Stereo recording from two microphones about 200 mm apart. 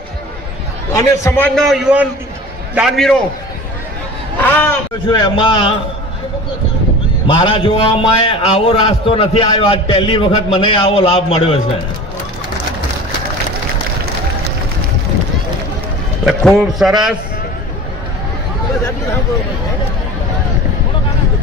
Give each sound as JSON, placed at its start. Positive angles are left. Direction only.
{"t": 0.9, "sound": "a man's voice", "side_deg": 15}
{"t": 1.5, "sound": "a man's voice", "side_deg": 0}
{"t": 4.4, "sound": "speech", "side_deg": 10}
{"t": 5.1, "sound": "a man's voice", "side_deg": 25}
{"t": 7.3, "sound": "a man's voice", "side_deg": 25}
{"t": 16.2, "sound": "a man's voice", "side_deg": 0}